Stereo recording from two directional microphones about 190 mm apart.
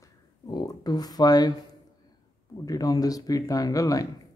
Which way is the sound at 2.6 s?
20° left (ahead or behind).